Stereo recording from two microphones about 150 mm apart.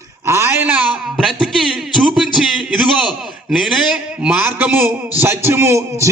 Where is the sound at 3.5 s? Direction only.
Centre (ahead or behind).